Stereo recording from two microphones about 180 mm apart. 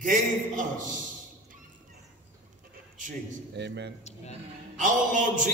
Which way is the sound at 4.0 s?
40° left (ahead or behind).